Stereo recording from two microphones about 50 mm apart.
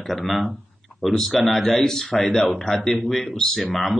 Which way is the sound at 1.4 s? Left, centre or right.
Centre.